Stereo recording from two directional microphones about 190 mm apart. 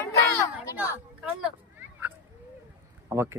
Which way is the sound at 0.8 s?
5° right (ahead or behind).